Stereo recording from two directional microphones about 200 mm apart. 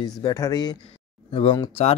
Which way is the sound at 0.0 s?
20° left (ahead or behind).